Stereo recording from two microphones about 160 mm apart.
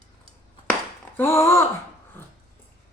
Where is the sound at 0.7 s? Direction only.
15° left (ahead or behind).